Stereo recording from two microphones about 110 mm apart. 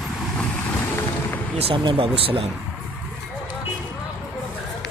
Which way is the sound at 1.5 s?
60° right (ahead or behind).